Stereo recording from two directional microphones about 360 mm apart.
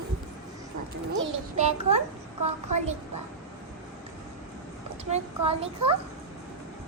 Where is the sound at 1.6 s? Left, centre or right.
Centre.